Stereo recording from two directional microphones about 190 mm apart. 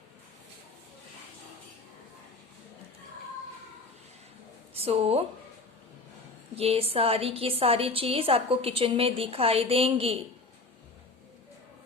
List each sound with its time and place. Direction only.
4.7 s speech: 30° right (ahead or behind)
6.6 s a woman's voice: 30° right (ahead or behind)